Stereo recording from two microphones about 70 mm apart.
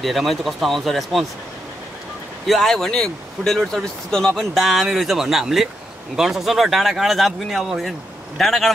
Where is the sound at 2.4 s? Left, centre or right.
Centre.